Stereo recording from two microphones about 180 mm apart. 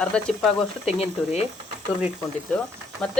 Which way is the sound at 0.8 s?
35° left (ahead or behind).